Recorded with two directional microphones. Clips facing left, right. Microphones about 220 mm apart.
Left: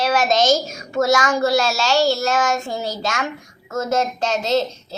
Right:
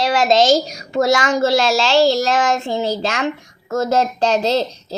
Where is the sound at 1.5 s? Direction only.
90° right.